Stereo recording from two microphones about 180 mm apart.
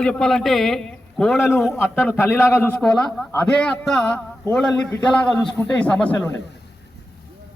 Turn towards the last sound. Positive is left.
turn(degrees=5)  # may be behind; listen again after turning